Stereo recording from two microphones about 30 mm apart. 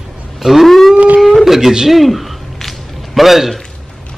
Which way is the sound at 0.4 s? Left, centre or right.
Centre.